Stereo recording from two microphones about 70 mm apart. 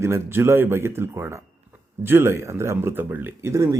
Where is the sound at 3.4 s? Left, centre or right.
Right.